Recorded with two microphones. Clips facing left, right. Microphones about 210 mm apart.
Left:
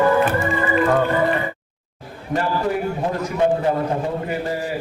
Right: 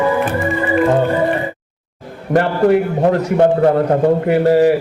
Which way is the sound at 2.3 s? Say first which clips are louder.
Right 9 dB; 70° right (ahead or behind).